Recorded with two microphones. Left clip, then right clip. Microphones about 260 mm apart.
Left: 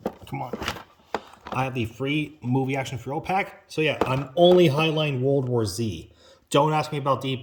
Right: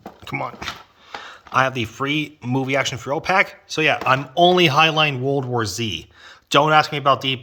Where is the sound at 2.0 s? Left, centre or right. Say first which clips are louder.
Right 5 dB; right.